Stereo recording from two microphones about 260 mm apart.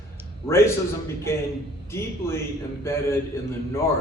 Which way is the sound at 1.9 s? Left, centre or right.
Centre.